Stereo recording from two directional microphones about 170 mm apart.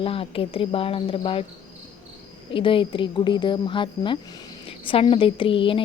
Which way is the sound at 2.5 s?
30° left (ahead or behind).